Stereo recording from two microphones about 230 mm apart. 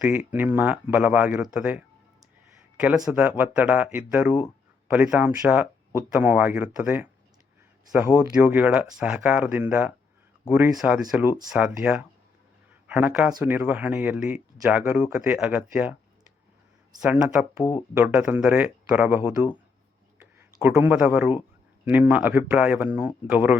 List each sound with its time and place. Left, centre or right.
0.0 s speech: centre
3.0 s speech: centre
17.0 s speech: centre
17.6 s speech: centre
17.9 s speech: centre